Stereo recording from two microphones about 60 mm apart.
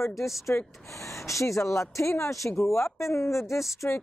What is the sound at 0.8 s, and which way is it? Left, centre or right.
Speech, left.